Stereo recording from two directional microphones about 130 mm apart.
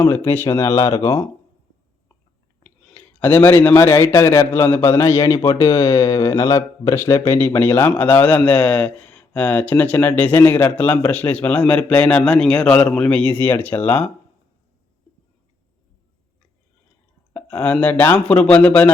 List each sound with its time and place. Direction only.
0.3 s speech: 20° left (ahead or behind)
2.9 s a man's voice: 15° left (ahead or behind)
17.3 s a man's voice: 10° left (ahead or behind)